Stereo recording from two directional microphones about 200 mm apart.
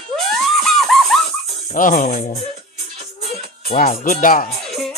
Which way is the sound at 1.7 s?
40° left (ahead or behind).